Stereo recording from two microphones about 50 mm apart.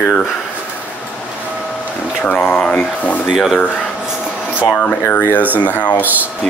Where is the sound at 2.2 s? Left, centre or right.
Left.